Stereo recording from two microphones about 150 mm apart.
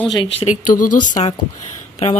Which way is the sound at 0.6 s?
65° left (ahead or behind).